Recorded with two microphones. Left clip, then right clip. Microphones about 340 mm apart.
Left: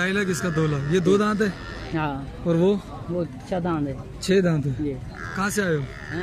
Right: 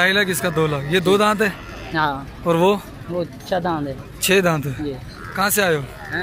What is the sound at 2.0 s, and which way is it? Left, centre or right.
Speech, right.